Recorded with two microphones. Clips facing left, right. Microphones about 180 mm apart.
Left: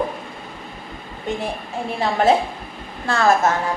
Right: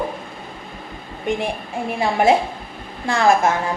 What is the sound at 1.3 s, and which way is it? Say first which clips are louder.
A woman's voice: right 3 dB; 15° right (ahead or behind).